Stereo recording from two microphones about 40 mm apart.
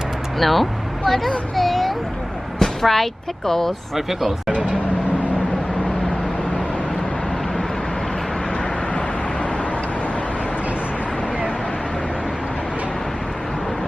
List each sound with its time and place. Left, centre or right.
0.3 s speech: centre
1.5 s a sound: centre
2.6 s speech: centre
3.9 s speech: centre
9.0 s vehicle: left